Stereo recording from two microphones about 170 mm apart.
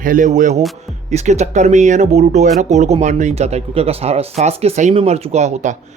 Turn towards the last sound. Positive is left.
turn(degrees=-45)  # may be behind; listen again after turning